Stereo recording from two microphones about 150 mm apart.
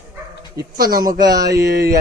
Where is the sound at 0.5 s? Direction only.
80° right.